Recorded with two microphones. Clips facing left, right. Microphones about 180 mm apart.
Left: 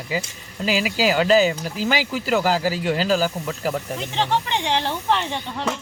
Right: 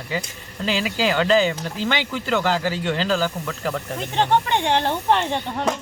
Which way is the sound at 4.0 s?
50° right (ahead or behind).